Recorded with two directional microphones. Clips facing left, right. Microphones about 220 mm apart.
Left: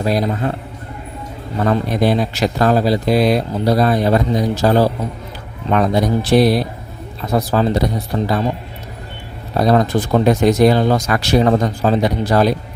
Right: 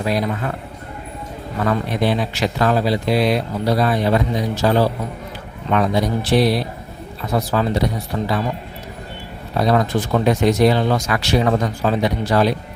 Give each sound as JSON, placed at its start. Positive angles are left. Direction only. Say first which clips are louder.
{"t": 0.0, "sound": "speech", "louder": "left 3 dB", "side_deg": 40}
{"t": 1.6, "sound": "speech", "louder": "left 3 dB", "side_deg": 35}
{"t": 9.6, "sound": "speech", "louder": "left 3 dB", "side_deg": 40}